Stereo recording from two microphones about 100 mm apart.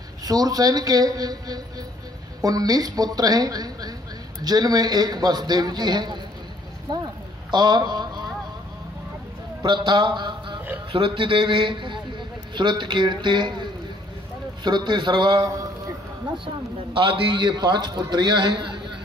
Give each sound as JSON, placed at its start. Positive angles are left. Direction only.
{"t": 0.2, "sound": "a man's voice", "side_deg": -40}
{"t": 9.6, "sound": "a man's voice", "side_deg": -50}
{"t": 15.3, "sound": "a man's voice", "side_deg": -35}
{"t": 16.9, "sound": "a man's voice", "side_deg": -60}